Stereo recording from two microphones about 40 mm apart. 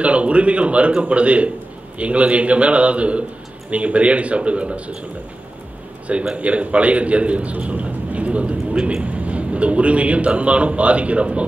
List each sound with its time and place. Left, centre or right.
0.0 s a man's voice: right
6.3 s a man's voice: right
8.7 s speech: right
9.0 s a man's voice: right